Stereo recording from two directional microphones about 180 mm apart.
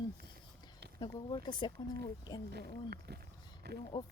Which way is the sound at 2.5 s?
65° right (ahead or behind).